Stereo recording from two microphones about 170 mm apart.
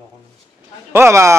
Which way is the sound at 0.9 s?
15° right (ahead or behind).